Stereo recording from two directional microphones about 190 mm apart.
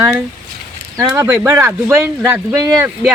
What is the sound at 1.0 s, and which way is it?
Speech, 15° right (ahead or behind).